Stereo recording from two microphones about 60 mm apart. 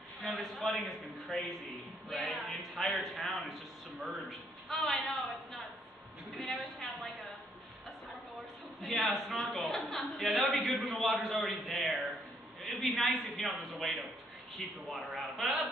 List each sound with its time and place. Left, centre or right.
0.2 s a man's voice: centre
8.8 s a man's voice: centre
9.3 s a woman's voice: left
9.6 s a man's voice: centre